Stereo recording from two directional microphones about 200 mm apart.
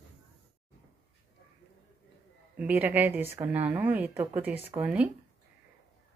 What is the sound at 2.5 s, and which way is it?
A woman's voice, 10° right (ahead or behind).